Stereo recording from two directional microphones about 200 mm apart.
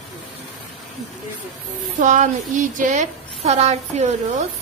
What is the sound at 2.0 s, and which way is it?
A woman's voice, 40° right (ahead or behind).